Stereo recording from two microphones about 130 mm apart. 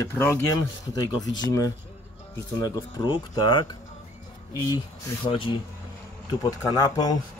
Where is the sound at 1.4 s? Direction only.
30° left (ahead or behind).